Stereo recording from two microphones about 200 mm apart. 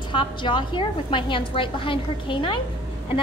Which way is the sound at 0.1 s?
25° left (ahead or behind).